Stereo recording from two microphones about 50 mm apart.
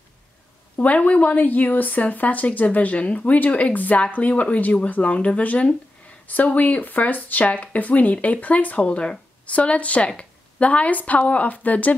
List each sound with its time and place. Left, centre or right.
0.7 s speech: left
8.8 s speech: centre